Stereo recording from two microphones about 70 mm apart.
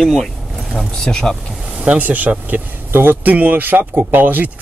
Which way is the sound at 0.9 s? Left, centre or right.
Centre.